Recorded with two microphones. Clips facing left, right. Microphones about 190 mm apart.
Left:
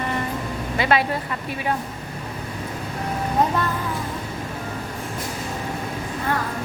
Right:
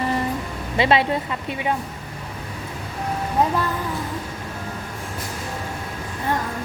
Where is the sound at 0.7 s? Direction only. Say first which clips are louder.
Right 3 dB; 25° right (ahead or behind).